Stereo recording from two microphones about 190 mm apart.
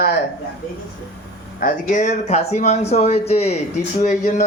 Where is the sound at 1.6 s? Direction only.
40° left (ahead or behind).